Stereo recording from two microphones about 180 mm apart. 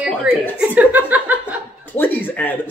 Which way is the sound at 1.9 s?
10° left (ahead or behind).